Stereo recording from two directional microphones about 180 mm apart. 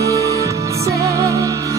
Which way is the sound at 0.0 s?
15° right (ahead or behind).